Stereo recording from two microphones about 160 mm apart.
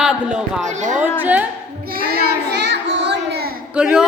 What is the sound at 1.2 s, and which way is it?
Speech, 10° right (ahead or behind).